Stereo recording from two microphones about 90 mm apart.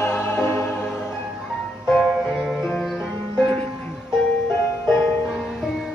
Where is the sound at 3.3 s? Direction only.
10° left (ahead or behind).